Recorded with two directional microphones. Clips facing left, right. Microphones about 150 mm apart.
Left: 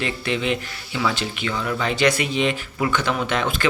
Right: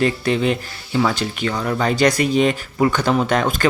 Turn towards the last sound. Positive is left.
turn(degrees=-40)  # may be behind; listen again after turning